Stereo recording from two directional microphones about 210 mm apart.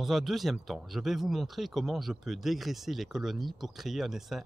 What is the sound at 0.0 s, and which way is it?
A man's voice, centre (ahead or behind).